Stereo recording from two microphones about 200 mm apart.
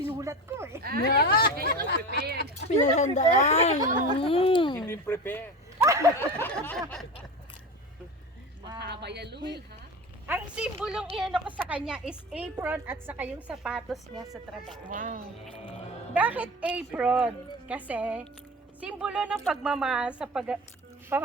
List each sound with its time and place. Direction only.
0.1 s speech: 15° right (ahead or behind)
0.8 s speech: 50° right (ahead or behind)
1.0 s speech: 50° left (ahead or behind)
2.6 s speech: 35° left (ahead or behind)
4.9 s speech: 10° left (ahead or behind)
5.8 s a sound: 15° right (ahead or behind)
6.1 s a woman's voice: 10° left (ahead or behind)
8.8 s speech: 55° right (ahead or behind)
10.2 s a woman's voice: 10° right (ahead or behind)
14.8 s speech: 40° right (ahead or behind)
16.1 s a woman's voice: 10° right (ahead or behind)